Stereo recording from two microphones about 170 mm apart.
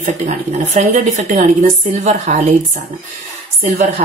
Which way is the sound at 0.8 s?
45° right (ahead or behind).